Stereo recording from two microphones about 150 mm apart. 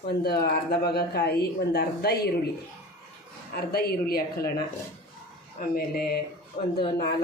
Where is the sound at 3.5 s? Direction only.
90° left.